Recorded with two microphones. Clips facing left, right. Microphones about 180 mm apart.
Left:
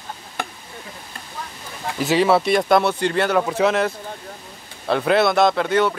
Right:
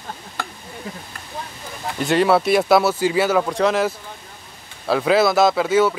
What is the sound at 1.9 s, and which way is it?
Speech, centre (ahead or behind).